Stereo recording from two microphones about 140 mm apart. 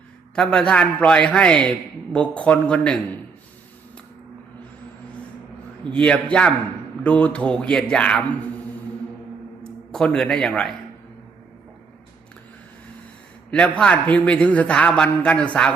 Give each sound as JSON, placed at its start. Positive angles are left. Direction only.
{"t": 0.3, "sound": "a man's voice", "side_deg": 5}
{"t": 5.8, "sound": "a man's voice", "side_deg": 5}
{"t": 9.6, "sound": "a man's voice", "side_deg": 5}
{"t": 13.5, "sound": "a man's voice", "side_deg": 5}